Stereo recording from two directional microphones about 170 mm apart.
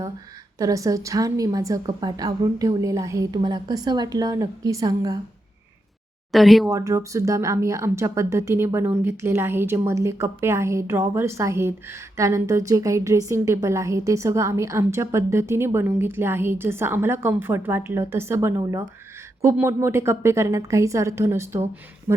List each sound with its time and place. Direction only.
0.6 s a woman's voice: 20° right (ahead or behind)
6.3 s speech: centre (ahead or behind)
6.7 s a woman's voice: 20° right (ahead or behind)